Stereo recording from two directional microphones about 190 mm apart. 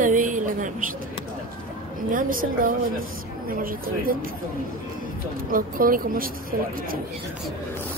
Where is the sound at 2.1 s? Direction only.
45° right (ahead or behind).